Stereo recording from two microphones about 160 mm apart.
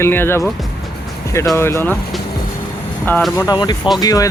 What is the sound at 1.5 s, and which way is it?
Speech, 15° left (ahead or behind).